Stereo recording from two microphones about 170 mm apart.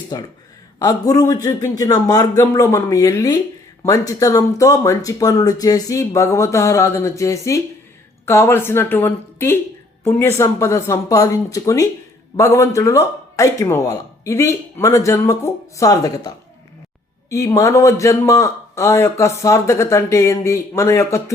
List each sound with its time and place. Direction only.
0.1 s speech: 20° left (ahead or behind)